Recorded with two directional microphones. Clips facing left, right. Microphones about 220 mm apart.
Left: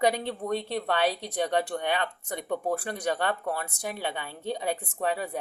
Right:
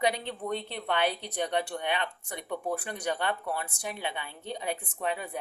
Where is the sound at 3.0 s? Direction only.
40° left (ahead or behind).